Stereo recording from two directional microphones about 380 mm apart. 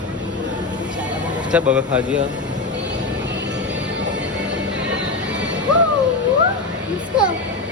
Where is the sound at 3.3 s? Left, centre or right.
Right.